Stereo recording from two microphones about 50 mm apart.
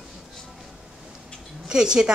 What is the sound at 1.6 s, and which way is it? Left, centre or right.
Speech, centre.